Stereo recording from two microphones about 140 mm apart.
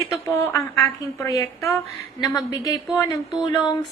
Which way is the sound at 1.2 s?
25° left (ahead or behind).